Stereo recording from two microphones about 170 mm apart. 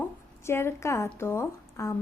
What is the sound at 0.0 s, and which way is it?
A woman's voice, 15° left (ahead or behind).